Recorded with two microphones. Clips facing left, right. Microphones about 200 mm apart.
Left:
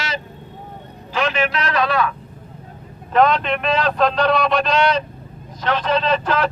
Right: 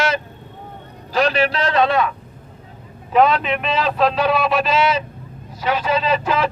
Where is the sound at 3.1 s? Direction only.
5° right (ahead or behind).